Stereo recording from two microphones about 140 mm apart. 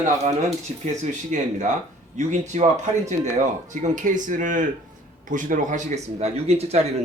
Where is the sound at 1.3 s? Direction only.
60° right (ahead or behind).